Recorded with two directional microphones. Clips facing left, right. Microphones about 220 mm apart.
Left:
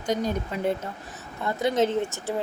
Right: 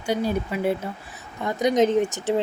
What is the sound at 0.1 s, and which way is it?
Speech, 10° right (ahead or behind).